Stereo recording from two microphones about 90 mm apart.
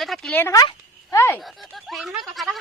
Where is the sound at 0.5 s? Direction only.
50° left (ahead or behind).